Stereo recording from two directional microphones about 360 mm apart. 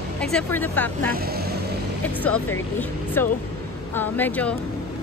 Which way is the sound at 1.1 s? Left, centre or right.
Right.